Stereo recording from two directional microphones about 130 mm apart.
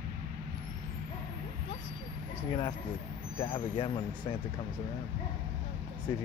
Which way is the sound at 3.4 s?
40° left (ahead or behind).